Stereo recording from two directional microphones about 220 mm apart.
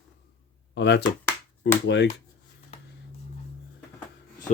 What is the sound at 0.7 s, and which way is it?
Speech, 50° left (ahead or behind).